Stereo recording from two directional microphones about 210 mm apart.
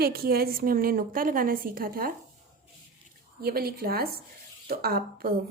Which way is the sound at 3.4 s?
45° right (ahead or behind).